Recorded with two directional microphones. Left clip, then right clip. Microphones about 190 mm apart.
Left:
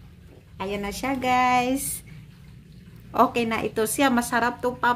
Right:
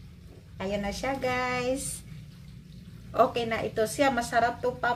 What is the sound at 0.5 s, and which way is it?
A woman's voice, 55° left (ahead or behind).